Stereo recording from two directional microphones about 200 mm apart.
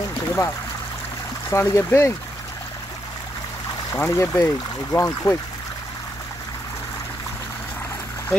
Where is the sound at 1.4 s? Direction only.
15° left (ahead or behind).